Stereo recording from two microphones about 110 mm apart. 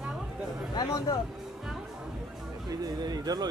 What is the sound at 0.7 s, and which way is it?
Speech, 35° left (ahead or behind).